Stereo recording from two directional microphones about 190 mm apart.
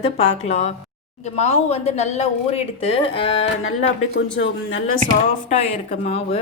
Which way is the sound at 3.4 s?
85° left.